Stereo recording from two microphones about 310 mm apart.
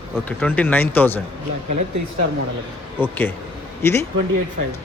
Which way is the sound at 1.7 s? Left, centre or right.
Right.